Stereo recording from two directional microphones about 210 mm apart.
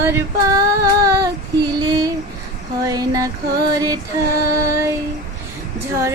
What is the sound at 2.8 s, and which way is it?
Female singing, 15° right (ahead or behind).